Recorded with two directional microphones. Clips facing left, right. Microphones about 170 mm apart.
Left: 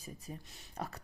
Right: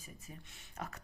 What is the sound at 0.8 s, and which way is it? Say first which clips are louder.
Speech: left 3 dB; 35° left (ahead or behind).